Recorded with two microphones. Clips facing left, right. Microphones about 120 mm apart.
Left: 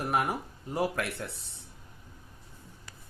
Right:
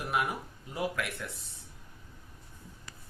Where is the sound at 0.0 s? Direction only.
40° left (ahead or behind).